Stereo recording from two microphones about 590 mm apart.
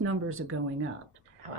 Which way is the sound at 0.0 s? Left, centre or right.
Right.